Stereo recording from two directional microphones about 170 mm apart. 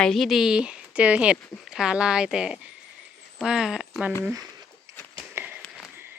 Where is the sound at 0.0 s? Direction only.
Centre (ahead or behind).